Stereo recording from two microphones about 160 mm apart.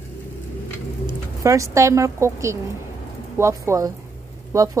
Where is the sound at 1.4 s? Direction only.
20° right (ahead or behind).